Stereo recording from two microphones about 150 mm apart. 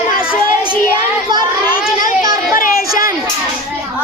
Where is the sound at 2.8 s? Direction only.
25° right (ahead or behind).